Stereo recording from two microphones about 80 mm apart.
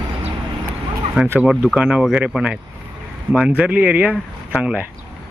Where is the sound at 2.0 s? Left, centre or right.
Centre.